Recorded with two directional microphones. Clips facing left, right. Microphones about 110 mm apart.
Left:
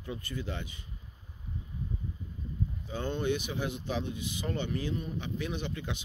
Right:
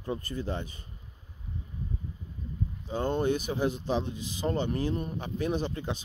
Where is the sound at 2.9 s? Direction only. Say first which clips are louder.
Right 4 dB; 35° right (ahead or behind).